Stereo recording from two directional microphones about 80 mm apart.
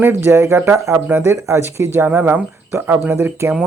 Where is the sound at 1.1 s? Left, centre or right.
Right.